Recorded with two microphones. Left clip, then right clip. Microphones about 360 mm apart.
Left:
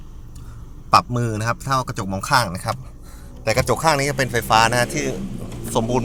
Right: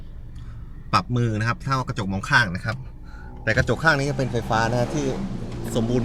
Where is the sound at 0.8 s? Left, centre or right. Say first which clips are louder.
Left 6 dB; centre.